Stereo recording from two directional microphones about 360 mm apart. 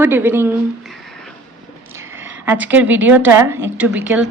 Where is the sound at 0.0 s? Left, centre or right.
Centre.